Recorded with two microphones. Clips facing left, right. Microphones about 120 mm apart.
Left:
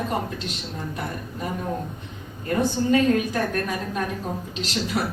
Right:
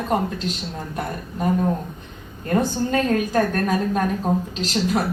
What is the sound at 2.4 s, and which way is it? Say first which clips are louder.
A woman's voice: right 1 dB; 45° right (ahead or behind).